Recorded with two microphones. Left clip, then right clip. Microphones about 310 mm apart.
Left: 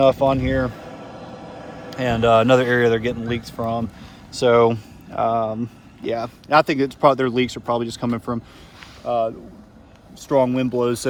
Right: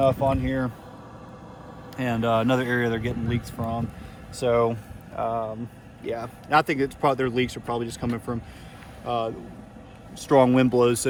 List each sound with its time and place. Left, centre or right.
0.0 s speech: left; by 11.1 s centre